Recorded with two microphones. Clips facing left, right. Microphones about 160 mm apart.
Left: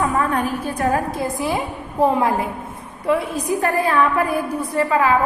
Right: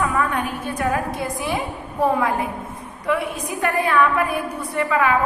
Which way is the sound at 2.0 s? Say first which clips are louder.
Left 2 dB; 25° left (ahead or behind).